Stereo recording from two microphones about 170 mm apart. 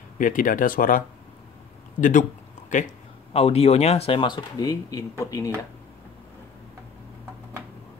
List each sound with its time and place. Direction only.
0.2 s speech: 50° left (ahead or behind)
3.3 s speech: 35° left (ahead or behind); by 5.5 s 15° left (ahead or behind)